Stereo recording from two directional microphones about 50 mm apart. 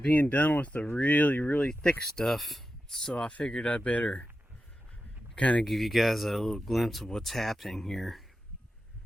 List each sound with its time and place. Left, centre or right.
0.1 s speech: left
1.5 s speech: centre
3.2 s speech: left
5.4 s speech: left
5.6 s speech: centre